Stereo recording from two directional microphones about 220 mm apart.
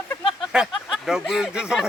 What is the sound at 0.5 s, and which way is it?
Speech, 5° right (ahead or behind).